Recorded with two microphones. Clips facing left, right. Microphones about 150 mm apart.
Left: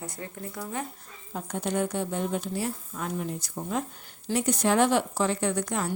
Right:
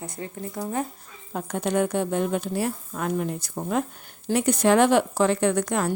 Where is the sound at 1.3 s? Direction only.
70° right (ahead or behind).